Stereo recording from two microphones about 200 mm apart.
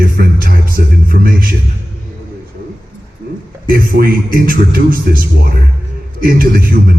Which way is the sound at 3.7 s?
45° right (ahead or behind).